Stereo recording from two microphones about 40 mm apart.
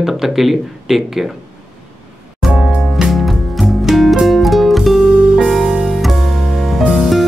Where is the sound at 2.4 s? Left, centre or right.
Centre.